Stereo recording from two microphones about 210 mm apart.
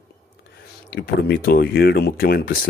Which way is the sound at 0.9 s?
50° left (ahead or behind).